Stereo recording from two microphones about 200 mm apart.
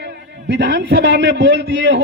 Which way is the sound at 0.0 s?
60° right (ahead or behind).